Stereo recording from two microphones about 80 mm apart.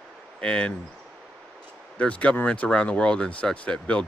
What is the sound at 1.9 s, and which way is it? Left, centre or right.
Speech, centre.